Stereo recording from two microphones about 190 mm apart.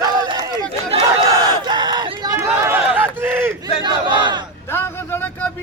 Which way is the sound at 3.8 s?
25° right (ahead or behind).